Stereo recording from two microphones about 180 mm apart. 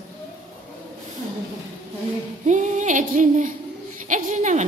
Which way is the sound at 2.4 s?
45° right (ahead or behind).